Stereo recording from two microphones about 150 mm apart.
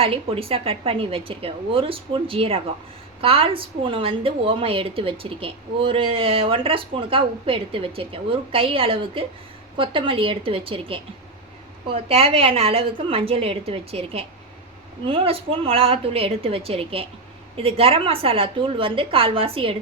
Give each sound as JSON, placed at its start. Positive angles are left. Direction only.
{"t": 0.0, "sound": "a woman's voice", "side_deg": -40}